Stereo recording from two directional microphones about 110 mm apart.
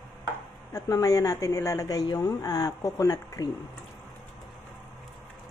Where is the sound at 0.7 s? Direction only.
30° left (ahead or behind).